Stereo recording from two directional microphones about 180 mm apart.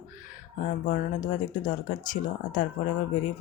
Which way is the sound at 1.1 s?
50° left (ahead or behind).